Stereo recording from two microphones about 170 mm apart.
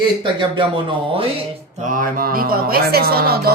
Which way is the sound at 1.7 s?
50° right (ahead or behind).